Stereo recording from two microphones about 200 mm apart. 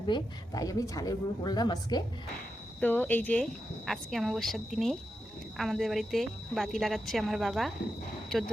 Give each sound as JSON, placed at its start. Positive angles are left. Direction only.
{"t": 0.0, "sound": "a woman's voice", "side_deg": 20}
{"t": 2.8, "sound": "a woman's voice", "side_deg": 10}